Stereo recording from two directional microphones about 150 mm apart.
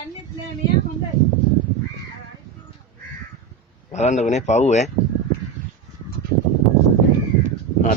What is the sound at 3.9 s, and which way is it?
A man's voice, 50° left (ahead or behind).